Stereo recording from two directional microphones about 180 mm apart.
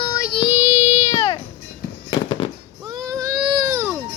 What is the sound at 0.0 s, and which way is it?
Child singing, 25° left (ahead or behind).